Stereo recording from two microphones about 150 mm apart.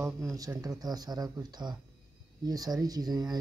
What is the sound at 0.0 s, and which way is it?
Speech, 20° right (ahead or behind).